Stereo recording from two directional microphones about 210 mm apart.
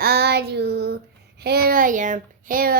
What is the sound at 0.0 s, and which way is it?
Child singing, 50° right (ahead or behind).